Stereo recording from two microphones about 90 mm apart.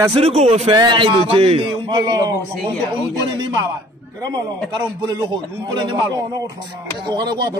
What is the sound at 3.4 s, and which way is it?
Speech, 50° right (ahead or behind).